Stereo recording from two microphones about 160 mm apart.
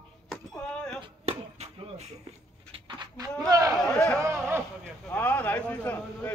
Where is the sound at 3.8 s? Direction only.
5° left (ahead or behind).